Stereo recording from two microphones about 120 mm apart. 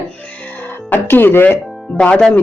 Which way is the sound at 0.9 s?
15° left (ahead or behind).